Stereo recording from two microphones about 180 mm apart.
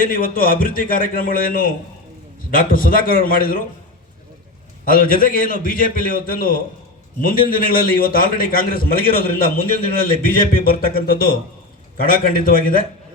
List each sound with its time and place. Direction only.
0.0 s a man's voice: 50° left (ahead or behind)
4.9 s a man's voice: 50° left (ahead or behind)